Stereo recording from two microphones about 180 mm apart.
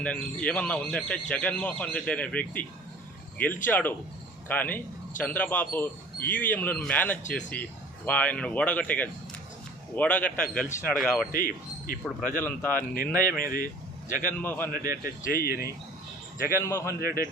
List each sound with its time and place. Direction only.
0.0 s a man's voice: 5° left (ahead or behind)
11.3 s speech: 50° left (ahead or behind)
12.4 s speech: 10° left (ahead or behind)
12.7 s speech: 50° left (ahead or behind)
14.4 s speech: 10° left (ahead or behind)
14.7 s speech: 50° left (ahead or behind)
16.6 s speech: 15° left (ahead or behind)